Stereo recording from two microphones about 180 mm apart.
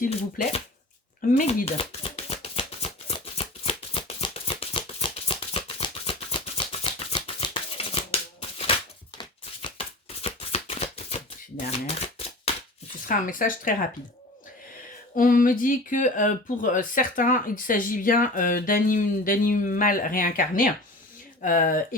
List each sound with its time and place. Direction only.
0.4 s speech: 55° left (ahead or behind)
1.4 s a sound: 40° left (ahead or behind)
10.2 s typewriter: 35° left (ahead or behind)
13.1 s speech: 50° left (ahead or behind)
15.1 s speech: 50° left (ahead or behind)